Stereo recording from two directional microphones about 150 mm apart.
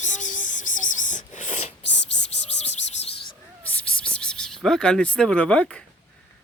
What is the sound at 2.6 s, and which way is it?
Bird, 45° left (ahead or behind).